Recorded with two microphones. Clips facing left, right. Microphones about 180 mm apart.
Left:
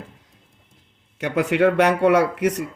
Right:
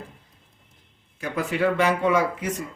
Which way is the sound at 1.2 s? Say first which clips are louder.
Left 6 dB; 75° left (ahead or behind).